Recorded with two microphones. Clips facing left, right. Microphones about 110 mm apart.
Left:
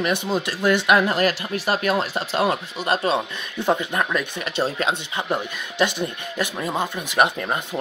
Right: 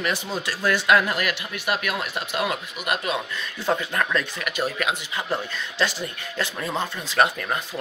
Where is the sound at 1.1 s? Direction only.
35° left (ahead or behind).